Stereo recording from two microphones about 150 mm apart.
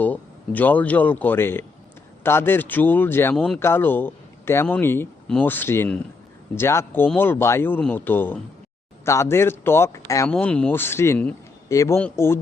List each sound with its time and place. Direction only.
0.0 s speech: 10° left (ahead or behind)
3.3 s speech: 5° left (ahead or behind)
3.6 s speech: 15° left (ahead or behind)
10.2 s speech: 5° left (ahead or behind)